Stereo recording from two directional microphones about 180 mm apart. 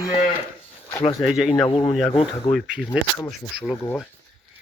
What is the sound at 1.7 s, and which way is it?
Speech, 25° left (ahead or behind).